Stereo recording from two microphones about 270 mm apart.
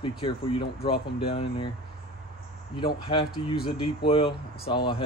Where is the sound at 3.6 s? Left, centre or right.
Centre.